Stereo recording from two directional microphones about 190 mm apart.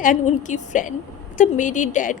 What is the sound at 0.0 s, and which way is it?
A woman's voice, 45° left (ahead or behind).